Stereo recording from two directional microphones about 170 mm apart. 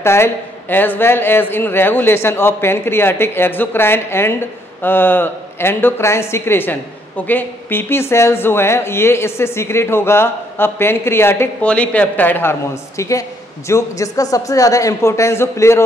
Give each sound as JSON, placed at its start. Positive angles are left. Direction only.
{"t": 0.0, "sound": "speech", "side_deg": 15}